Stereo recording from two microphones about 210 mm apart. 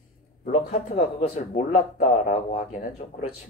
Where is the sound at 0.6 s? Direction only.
35° left (ahead or behind).